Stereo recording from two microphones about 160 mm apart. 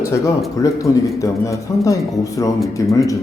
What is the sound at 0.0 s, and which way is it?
Speech, 15° left (ahead or behind).